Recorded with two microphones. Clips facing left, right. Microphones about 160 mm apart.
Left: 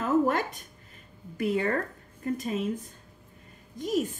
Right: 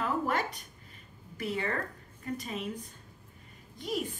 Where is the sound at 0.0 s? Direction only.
45° left (ahead or behind).